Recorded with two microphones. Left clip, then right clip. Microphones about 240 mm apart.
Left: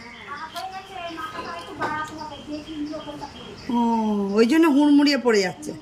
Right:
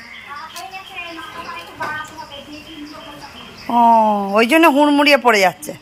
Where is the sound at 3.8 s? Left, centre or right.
Centre.